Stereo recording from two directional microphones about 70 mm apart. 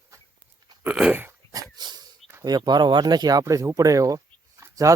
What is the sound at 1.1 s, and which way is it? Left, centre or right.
Dog, right.